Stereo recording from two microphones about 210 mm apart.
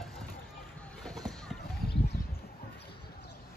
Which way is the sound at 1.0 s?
5° left (ahead or behind).